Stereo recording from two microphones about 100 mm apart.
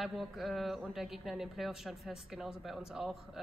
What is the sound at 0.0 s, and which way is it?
A man's voice, centre (ahead or behind).